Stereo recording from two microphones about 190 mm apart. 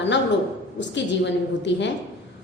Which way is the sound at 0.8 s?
70° left (ahead or behind).